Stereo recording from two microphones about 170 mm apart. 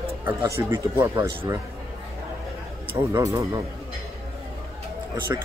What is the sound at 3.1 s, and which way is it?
Speech, 20° right (ahead or behind).